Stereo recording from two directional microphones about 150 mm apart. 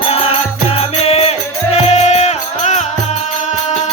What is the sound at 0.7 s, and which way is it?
Music, 45° left (ahead or behind).